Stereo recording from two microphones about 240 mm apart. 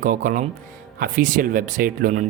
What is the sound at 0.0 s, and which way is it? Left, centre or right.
Speech, right.